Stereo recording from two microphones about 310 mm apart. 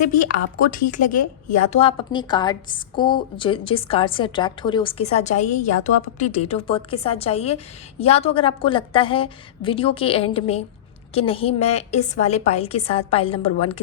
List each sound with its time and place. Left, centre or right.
0.7 s a woman's voice: left